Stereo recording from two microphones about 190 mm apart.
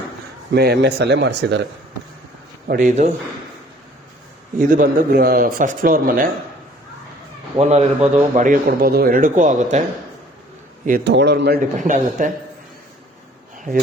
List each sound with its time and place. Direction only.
0.5 s speech: 60° right (ahead or behind)
2.6 s a man's voice: 45° right (ahead or behind)
4.5 s speech: 45° right (ahead or behind)
7.6 s a man's voice: 35° right (ahead or behind)
10.8 s speech: 50° right (ahead or behind)
11.1 s speech: 65° right (ahead or behind)
11.8 s speech: 40° right (ahead or behind)